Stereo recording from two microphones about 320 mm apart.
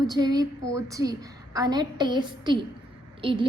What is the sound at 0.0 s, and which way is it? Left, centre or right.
A woman's voice, centre.